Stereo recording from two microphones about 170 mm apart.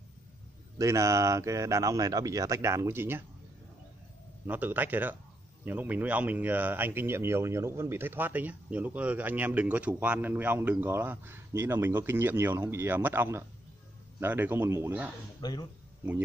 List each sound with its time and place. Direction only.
0.7 s speech: 20° right (ahead or behind)
4.5 s speech: 10° right (ahead or behind)
15.4 s speech: 25° left (ahead or behind)